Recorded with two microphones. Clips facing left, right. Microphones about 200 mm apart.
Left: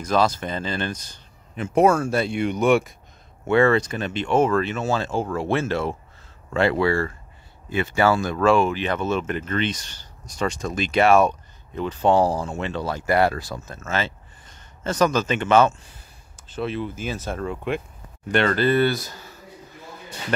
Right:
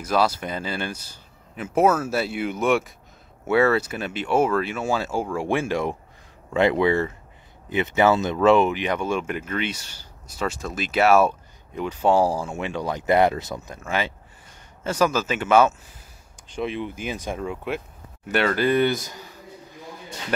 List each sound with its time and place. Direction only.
0.0 s speech: 10° right (ahead or behind)